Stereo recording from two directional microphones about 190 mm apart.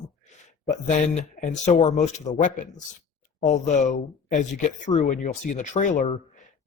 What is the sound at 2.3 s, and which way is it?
Speech, 25° left (ahead or behind).